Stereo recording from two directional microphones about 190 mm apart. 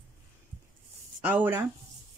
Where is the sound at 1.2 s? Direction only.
10° right (ahead or behind).